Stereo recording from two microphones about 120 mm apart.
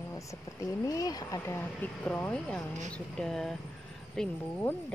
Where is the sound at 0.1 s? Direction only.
25° left (ahead or behind).